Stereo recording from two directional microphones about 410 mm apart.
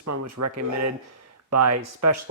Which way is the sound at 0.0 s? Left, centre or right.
Right.